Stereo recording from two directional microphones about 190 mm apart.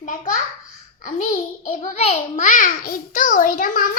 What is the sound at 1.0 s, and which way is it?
A child's voice, 40° left (ahead or behind).